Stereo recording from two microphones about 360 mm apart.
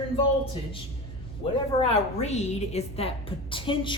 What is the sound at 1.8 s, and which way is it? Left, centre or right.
A woman's voice, centre.